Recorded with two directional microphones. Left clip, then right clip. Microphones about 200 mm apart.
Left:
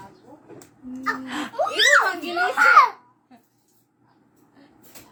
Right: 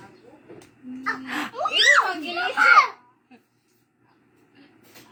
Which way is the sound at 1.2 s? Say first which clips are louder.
Left 2 dB; 15° left (ahead or behind).